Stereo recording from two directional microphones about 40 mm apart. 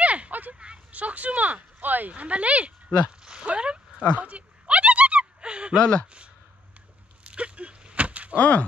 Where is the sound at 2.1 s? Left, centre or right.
Right.